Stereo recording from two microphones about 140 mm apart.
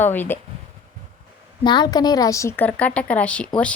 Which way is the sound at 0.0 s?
15° left (ahead or behind).